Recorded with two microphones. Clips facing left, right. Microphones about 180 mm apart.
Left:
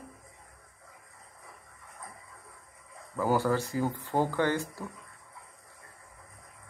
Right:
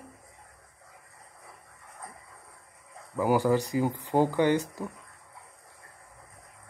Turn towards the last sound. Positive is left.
turn(degrees=-15)  # may be behind; listen again after turning